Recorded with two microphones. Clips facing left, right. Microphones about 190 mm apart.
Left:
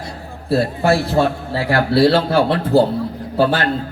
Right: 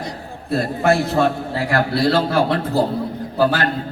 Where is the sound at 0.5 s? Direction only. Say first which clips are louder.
Left 1 dB; 35° left (ahead or behind).